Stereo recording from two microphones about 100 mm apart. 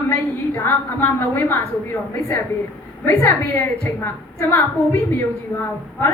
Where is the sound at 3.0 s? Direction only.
25° left (ahead or behind).